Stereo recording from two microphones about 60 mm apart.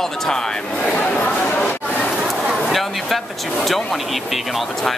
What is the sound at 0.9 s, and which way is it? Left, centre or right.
Chatter, centre.